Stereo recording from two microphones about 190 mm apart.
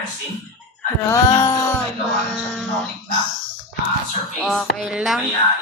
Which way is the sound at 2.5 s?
Centre (ahead or behind).